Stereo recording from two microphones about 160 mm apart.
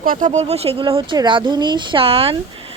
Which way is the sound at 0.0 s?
60° right (ahead or behind).